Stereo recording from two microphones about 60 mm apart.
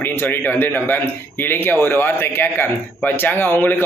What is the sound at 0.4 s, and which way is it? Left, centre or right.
Speech, left.